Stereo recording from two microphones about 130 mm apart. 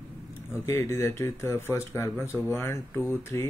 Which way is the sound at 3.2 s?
20° left (ahead or behind).